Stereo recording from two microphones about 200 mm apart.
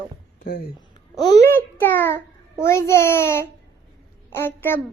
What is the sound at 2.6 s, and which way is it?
A child's voice, 15° left (ahead or behind).